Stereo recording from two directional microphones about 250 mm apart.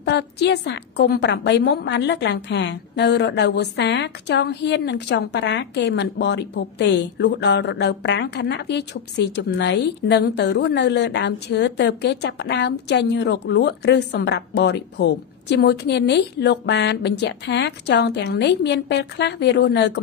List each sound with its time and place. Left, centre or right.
0.0 s a woman's voice: left